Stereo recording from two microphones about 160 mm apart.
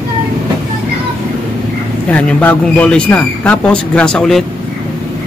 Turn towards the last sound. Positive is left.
turn(degrees=5)  # may be behind; listen again after turning